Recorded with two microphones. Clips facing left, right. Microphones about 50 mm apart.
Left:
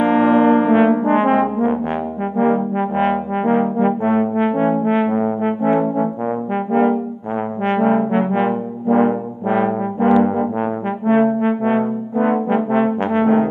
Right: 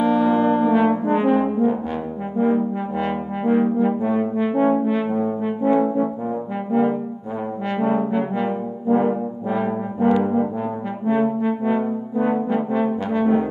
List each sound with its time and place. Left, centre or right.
0.0 s brass instrument: left
3.7 s music: left
4.6 s brass instrument: left